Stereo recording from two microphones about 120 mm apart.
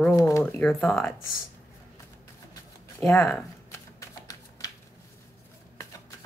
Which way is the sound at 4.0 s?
30° left (ahead or behind).